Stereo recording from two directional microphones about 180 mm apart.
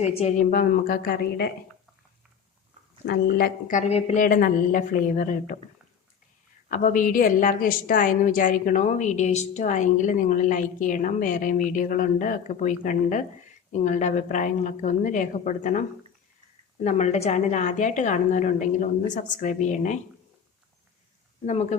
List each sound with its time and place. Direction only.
0.0 s a woman's voice: 35° left (ahead or behind); by 1.5 s 55° left (ahead or behind)
3.1 s a woman's voice: 55° left (ahead or behind); by 4.2 s 35° left (ahead or behind)
4.2 s a woman's voice: 50° left (ahead or behind)
6.7 s a woman's voice: 45° left (ahead or behind)
16.8 s a woman's voice: 40° left (ahead or behind)
21.4 s speech: 35° left (ahead or behind)